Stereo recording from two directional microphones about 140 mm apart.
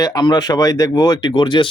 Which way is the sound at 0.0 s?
30° left (ahead or behind).